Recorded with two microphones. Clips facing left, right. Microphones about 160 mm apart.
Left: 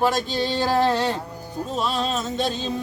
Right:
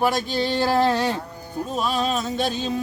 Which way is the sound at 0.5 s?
15° left (ahead or behind).